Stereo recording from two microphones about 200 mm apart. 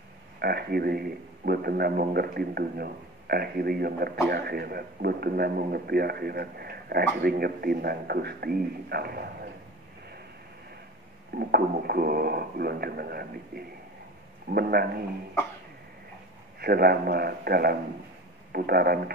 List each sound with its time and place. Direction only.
0.4 s a man's voice: 50° right (ahead or behind)
11.3 s a man's voice: 50° right (ahead or behind)
16.5 s a man's voice: 50° right (ahead or behind)